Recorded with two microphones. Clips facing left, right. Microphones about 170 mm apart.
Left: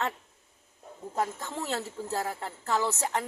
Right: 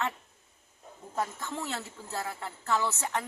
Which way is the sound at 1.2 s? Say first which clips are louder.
Left 2 dB; 35° left (ahead or behind).